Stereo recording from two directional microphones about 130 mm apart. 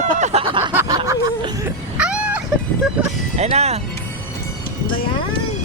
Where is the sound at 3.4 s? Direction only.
55° right (ahead or behind).